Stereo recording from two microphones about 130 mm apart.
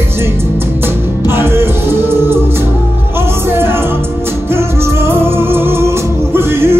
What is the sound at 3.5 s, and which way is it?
Music, 20° right (ahead or behind).